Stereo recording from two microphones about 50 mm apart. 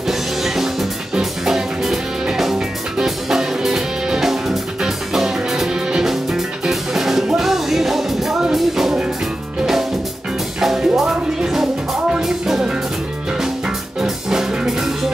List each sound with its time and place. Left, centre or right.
0.1 s music: centre
10.6 s music: centre
14.0 s music: centre